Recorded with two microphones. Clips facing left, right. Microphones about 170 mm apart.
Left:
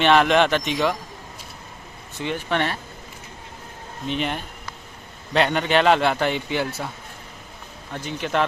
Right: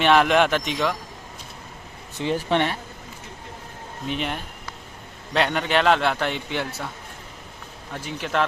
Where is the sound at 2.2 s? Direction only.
35° right (ahead or behind).